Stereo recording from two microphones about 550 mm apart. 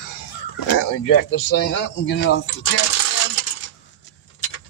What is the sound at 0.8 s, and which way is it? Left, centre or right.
Speech, left.